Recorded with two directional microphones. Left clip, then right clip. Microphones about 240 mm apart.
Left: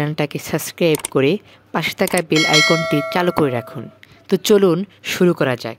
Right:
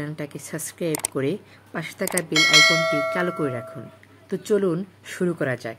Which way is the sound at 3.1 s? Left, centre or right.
Left.